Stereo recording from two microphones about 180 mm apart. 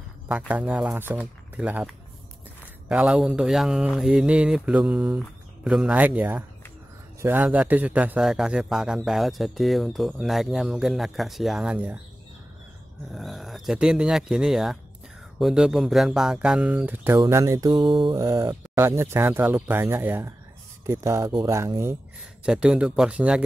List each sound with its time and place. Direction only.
0.3 s a man's voice: 5° right (ahead or behind)
13.1 s a man's voice: centre (ahead or behind); by 21.9 s 15° right (ahead or behind)
22.4 s a man's voice: 5° right (ahead or behind)